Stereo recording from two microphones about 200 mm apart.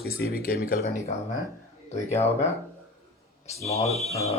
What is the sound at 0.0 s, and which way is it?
Speech, 50° left (ahead or behind).